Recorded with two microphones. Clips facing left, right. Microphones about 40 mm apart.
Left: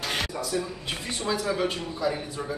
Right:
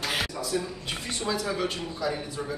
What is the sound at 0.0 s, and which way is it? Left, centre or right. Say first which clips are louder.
Speech: even; centre.